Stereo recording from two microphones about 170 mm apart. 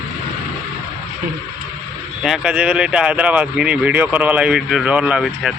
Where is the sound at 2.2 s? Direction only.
5° right (ahead or behind).